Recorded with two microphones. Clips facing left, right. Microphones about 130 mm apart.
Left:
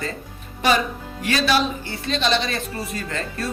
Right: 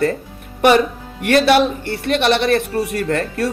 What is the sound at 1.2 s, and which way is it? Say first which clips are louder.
Speech: right 8 dB; 60° right (ahead or behind).